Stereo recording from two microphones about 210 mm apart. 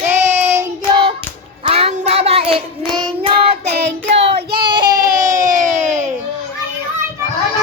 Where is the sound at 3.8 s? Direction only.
55° right (ahead or behind).